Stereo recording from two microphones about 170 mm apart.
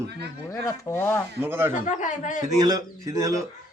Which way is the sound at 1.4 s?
15° right (ahead or behind).